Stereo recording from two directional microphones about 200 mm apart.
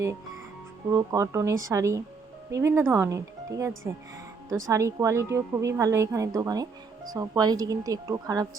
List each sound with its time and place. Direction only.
0.9 s a woman's voice: 15° right (ahead or behind)
4.7 s a woman's voice: 15° right (ahead or behind)